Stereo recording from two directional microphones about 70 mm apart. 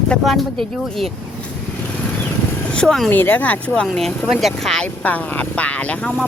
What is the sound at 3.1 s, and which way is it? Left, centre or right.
Speech, left.